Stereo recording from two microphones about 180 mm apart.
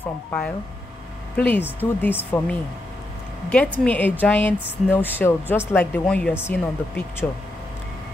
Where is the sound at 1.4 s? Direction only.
10° left (ahead or behind).